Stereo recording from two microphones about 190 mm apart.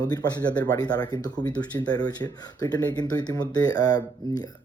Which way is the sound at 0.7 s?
20° left (ahead or behind).